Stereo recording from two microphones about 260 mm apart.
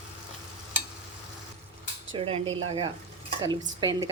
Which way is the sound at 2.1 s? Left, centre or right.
Right.